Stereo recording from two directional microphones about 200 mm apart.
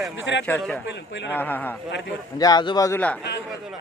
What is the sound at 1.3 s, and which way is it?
Speech, 10° left (ahead or behind).